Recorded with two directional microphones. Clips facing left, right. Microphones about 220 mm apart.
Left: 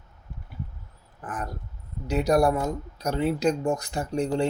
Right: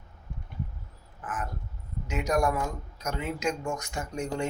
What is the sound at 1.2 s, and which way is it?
Speech, 35° left (ahead or behind).